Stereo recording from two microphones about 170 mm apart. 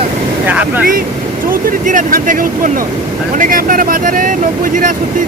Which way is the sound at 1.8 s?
50° right (ahead or behind).